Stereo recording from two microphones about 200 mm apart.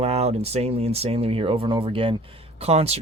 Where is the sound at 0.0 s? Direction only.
30° right (ahead or behind).